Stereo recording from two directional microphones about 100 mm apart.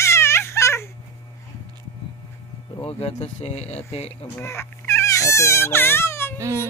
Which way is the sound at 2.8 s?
75° left (ahead or behind).